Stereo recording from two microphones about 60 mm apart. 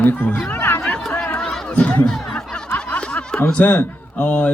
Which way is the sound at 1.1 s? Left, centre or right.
Left.